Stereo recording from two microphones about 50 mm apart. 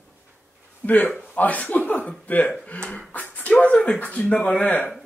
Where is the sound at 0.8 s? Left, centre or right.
Left.